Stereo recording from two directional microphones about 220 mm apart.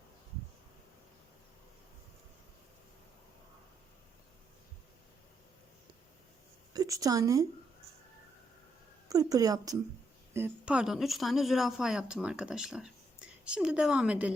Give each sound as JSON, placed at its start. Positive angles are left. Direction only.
{"t": 6.7, "sound": "speech", "side_deg": -15}
{"t": 9.0, "sound": "a woman's voice", "side_deg": -15}